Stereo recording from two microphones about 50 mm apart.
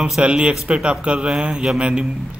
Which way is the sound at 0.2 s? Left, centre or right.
Right.